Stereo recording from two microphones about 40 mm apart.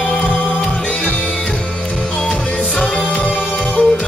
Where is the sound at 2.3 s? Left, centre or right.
Centre.